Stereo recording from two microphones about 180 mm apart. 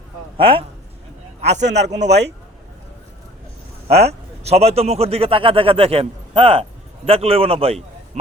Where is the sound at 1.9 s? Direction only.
70° right (ahead or behind).